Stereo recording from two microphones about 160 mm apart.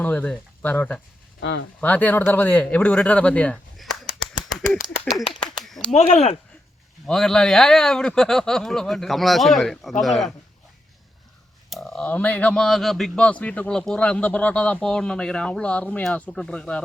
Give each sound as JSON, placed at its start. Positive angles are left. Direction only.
{"t": 0.0, "sound": "speech", "side_deg": 10}
{"t": 4.8, "sound": "speech", "side_deg": 45}
{"t": 7.1, "sound": "speech", "side_deg": 5}
{"t": 11.7, "sound": "speech", "side_deg": 0}